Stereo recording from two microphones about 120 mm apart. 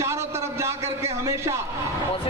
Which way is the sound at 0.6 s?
25° right (ahead or behind).